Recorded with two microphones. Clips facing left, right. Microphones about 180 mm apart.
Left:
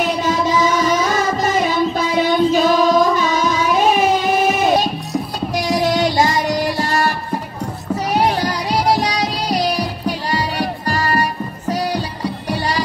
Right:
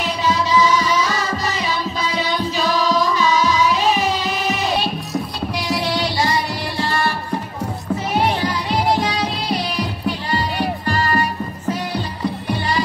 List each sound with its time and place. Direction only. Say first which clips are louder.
0.0 s music: left 3 dB; 50° left (ahead or behind)
8.1 s music: left 2 dB; 40° left (ahead or behind)